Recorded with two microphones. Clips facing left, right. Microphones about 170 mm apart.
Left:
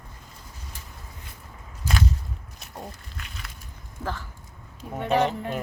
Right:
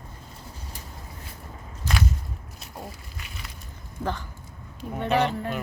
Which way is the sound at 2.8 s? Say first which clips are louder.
Left 1 dB; 5° right (ahead or behind).